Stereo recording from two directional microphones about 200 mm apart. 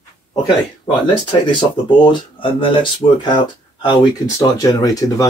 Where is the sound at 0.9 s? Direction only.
25° left (ahead or behind).